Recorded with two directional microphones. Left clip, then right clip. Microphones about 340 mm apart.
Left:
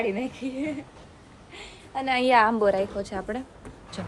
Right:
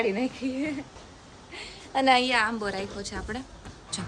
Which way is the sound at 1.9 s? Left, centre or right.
Right.